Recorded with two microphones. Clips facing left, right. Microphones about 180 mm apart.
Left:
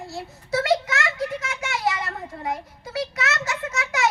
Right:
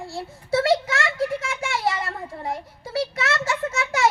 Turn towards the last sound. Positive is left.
turn(degrees=-30)  # may be behind; listen again after turning